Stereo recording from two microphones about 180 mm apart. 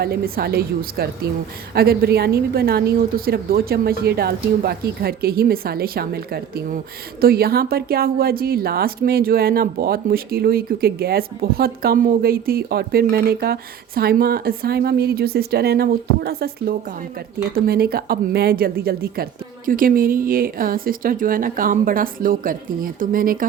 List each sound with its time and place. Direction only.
0.0 s a woman's voice: 60° right (ahead or behind)